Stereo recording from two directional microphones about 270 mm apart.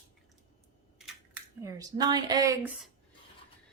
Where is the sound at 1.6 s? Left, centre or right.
Centre.